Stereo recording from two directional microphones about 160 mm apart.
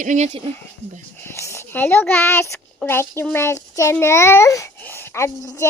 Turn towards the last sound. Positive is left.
turn(degrees=15)  # may be behind; listen again after turning